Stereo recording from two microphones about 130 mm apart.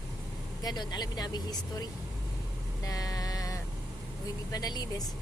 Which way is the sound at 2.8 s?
30° left (ahead or behind).